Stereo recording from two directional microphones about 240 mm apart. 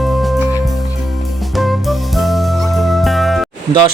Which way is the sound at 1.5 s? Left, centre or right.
Centre.